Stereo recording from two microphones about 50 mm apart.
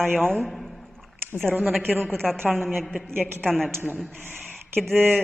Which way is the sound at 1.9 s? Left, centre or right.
Right.